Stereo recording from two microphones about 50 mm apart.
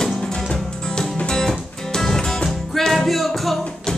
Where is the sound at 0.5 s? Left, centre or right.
Centre.